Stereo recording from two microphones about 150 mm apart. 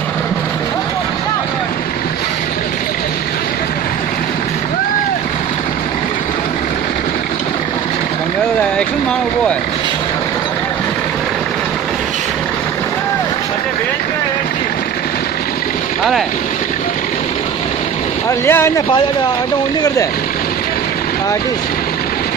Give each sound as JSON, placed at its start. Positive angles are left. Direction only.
{"t": 18.4, "sound": "speech", "side_deg": 15}